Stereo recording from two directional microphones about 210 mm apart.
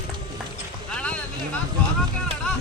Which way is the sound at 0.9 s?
5° left (ahead or behind).